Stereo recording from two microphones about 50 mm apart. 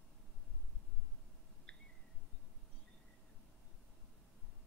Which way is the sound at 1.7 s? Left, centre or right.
Centre.